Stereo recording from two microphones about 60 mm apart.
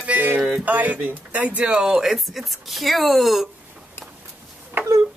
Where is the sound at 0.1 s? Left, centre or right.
Right.